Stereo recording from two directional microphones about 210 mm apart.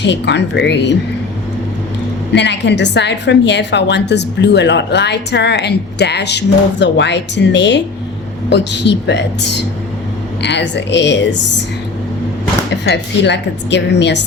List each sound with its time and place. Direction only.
0.0 s a woman's voice: 55° left (ahead or behind)
2.3 s a woman's voice: 55° left (ahead or behind)
12.7 s a woman's voice: 55° left (ahead or behind)